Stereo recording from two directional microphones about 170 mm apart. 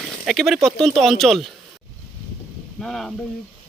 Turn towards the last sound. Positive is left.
turn(degrees=0)  # may be behind; listen again after turning